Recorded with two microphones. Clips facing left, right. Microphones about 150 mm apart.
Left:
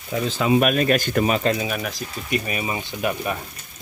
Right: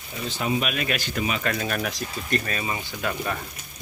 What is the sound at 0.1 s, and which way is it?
Speech, 90° left.